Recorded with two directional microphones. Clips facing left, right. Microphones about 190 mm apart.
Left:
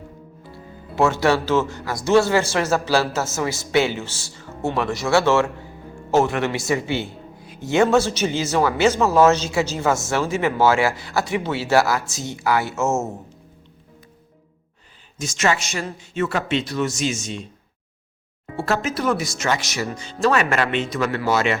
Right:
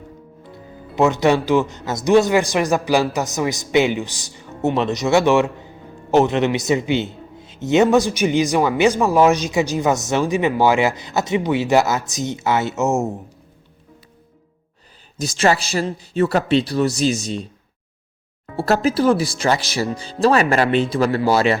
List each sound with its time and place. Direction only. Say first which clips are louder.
0.5 s speech: right 2 dB; 20° right (ahead or behind)
15.2 s speech: right 4 dB; 35° right (ahead or behind)
18.5 s speech: right 5 dB; 35° right (ahead or behind)